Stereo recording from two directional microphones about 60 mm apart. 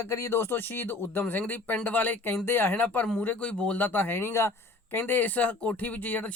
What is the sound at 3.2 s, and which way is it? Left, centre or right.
Speech, left.